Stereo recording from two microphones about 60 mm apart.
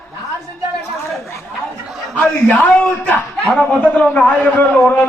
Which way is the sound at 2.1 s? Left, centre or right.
Left.